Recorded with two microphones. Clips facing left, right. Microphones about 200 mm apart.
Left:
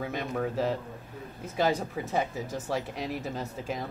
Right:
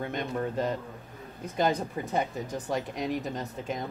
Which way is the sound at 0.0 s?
5° left (ahead or behind).